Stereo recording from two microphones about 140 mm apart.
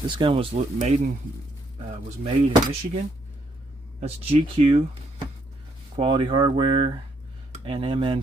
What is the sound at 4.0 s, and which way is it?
Speech, 45° right (ahead or behind).